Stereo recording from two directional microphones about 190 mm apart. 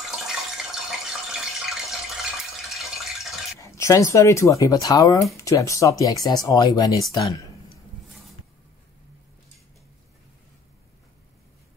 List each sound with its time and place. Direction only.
0.0 s water: centre (ahead or behind)
2.7 s a sound: centre (ahead or behind)
3.6 s speech: 15° left (ahead or behind)